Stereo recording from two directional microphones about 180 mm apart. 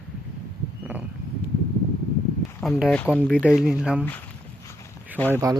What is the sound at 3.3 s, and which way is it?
Speech, 5° right (ahead or behind).